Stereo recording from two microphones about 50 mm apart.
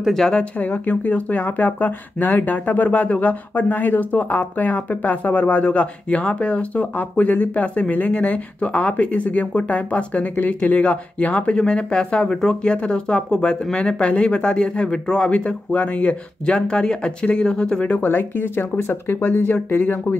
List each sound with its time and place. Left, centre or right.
0.3 s speech: left
19.2 s speech: left